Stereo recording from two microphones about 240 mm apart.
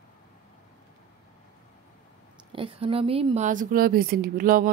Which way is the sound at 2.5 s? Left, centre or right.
Right.